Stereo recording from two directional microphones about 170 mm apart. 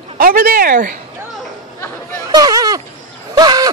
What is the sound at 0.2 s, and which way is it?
Speech, 60° right (ahead or behind).